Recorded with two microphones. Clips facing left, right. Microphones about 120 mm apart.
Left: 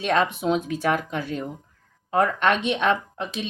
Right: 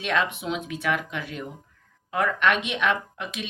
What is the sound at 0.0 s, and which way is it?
Speech, 40° left (ahead or behind).